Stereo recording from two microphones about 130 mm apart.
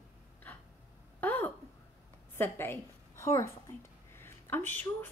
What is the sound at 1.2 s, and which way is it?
A woman's voice, 15° left (ahead or behind).